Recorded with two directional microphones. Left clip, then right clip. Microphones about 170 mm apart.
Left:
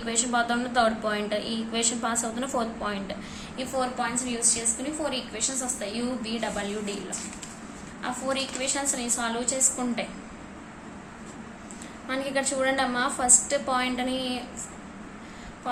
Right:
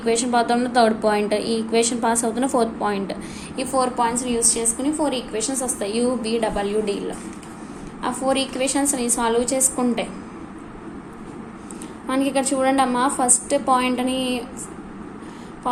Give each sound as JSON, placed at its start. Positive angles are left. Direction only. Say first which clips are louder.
{"t": 0.0, "sound": "a woman's voice", "louder": "right 7 dB", "side_deg": -25}
{"t": 8.0, "sound": "a woman's voice", "louder": "right 7 dB", "side_deg": -35}
{"t": 12.0, "sound": "a woman's voice", "louder": "right 7 dB", "side_deg": -25}